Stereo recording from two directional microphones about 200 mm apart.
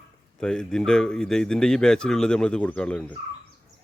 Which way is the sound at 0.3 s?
5° left (ahead or behind).